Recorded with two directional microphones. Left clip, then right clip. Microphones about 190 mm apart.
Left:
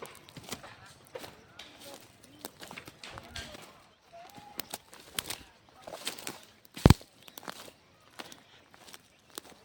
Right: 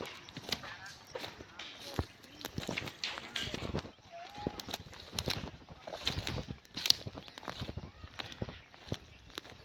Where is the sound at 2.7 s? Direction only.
50° left (ahead or behind).